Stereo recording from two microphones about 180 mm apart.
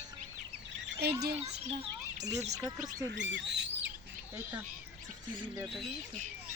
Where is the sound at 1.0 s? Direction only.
65° right (ahead or behind).